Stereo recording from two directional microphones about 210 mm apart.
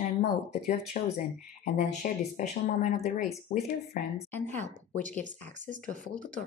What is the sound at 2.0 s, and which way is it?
Speech, 40° left (ahead or behind).